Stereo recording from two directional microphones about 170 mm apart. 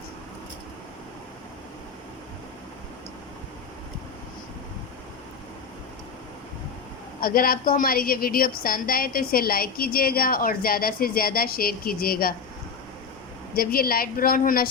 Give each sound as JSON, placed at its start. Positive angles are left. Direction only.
{"t": 7.2, "sound": "a woman's voice", "side_deg": 60}
{"t": 13.6, "sound": "a woman's voice", "side_deg": 60}